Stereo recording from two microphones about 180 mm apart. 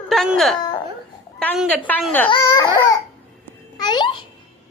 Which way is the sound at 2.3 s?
20° left (ahead or behind).